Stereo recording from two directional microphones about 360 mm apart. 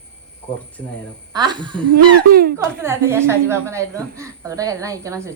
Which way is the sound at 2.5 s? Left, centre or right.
Centre.